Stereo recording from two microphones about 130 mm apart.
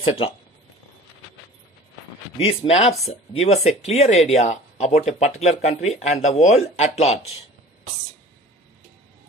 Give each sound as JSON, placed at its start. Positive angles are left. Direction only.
{"t": 0.0, "sound": "speech", "side_deg": 45}
{"t": 2.4, "sound": "speech", "side_deg": 50}